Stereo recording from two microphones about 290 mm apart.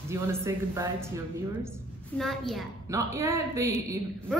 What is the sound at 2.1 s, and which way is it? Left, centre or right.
Speech, centre.